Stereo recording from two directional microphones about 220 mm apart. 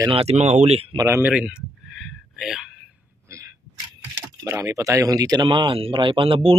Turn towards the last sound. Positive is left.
turn(degrees=-25)  # may be behind; listen again after turning